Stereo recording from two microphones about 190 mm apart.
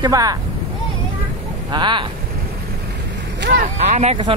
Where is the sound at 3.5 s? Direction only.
40° right (ahead or behind).